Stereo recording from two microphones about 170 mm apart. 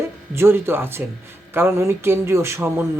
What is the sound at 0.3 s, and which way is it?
Speech, 15° right (ahead or behind).